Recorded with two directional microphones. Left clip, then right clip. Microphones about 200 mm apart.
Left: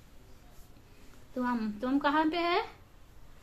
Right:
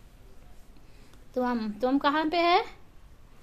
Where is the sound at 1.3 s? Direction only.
50° right (ahead or behind).